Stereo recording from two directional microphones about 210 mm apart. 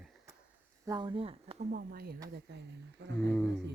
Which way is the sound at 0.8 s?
20° right (ahead or behind).